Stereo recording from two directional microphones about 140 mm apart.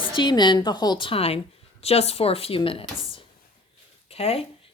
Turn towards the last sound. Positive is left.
turn(degrees=45)  # may be behind; listen again after turning